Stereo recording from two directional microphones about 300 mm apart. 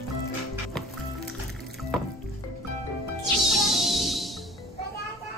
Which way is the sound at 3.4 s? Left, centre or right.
Centre.